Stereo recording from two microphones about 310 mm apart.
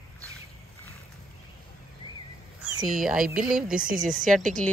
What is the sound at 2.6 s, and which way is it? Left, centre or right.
Speech, centre.